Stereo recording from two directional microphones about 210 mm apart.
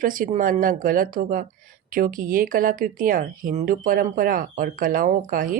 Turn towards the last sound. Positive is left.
turn(degrees=-40)  # may be behind; listen again after turning